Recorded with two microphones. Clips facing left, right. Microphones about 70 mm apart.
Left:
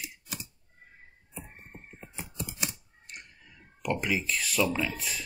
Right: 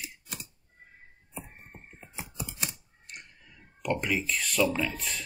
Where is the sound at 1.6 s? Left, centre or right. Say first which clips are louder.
Left 2 dB; centre.